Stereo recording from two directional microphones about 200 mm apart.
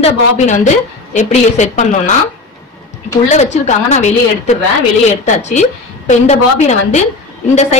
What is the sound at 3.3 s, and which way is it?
A woman's voice, 35° left (ahead or behind).